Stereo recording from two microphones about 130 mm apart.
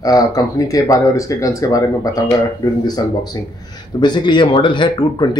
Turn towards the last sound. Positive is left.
turn(degrees=35)  # may be behind; listen again after turning